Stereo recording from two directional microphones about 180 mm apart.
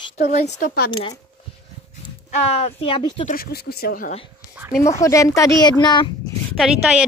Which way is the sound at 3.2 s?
55° left (ahead or behind).